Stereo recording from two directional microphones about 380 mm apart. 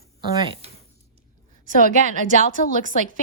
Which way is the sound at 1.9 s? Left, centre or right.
Centre.